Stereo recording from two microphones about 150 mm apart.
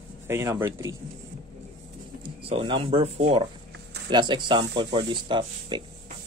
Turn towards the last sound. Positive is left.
turn(degrees=-30)  # may be behind; listen again after turning